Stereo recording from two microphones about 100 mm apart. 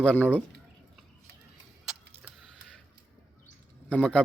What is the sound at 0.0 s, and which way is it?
Speech, 15° left (ahead or behind).